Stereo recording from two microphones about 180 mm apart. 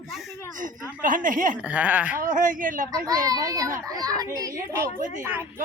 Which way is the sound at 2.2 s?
45° right (ahead or behind).